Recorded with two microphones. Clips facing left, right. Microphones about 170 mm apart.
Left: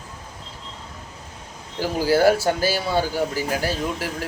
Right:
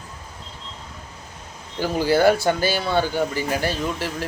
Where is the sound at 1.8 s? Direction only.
10° left (ahead or behind).